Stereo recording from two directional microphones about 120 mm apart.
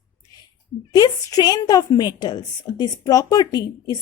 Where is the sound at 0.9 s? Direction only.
30° left (ahead or behind).